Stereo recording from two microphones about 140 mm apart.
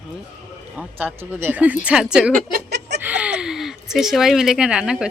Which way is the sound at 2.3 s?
80° right.